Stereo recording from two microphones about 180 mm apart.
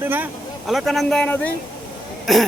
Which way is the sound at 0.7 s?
Centre (ahead or behind).